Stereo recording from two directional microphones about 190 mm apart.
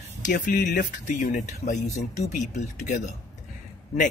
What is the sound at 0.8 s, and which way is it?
A man's voice, 40° left (ahead or behind).